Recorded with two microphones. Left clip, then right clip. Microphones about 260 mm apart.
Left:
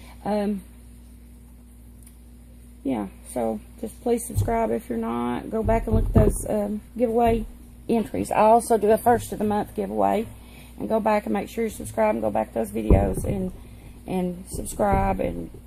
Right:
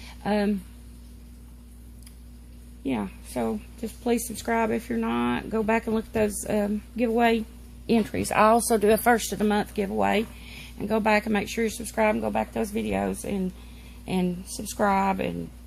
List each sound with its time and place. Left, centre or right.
0.2 s speech: right
2.8 s speech: right
14.0 s speech: right